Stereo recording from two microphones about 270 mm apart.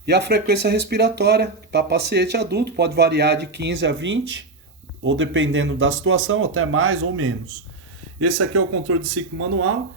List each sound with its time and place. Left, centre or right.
0.0 s speech: right